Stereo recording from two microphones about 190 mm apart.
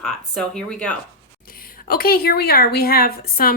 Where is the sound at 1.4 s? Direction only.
50° left (ahead or behind).